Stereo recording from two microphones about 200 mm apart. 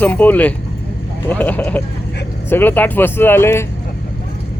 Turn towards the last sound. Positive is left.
turn(degrees=10)  # may be behind; listen again after turning